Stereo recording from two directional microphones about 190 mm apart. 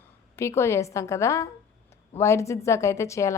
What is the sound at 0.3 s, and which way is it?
A woman's voice, 15° left (ahead or behind).